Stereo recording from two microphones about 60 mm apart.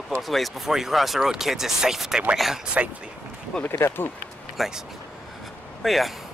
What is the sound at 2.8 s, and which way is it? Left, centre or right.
Speech, right.